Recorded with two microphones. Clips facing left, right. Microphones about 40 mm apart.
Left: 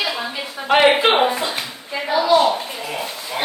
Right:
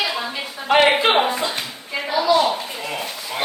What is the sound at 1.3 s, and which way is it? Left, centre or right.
Clapping, centre.